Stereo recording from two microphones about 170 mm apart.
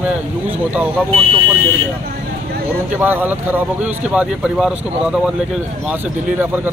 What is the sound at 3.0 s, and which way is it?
Speech, 10° right (ahead or behind).